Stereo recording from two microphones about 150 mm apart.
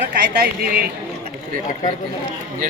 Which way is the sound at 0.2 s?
90° right.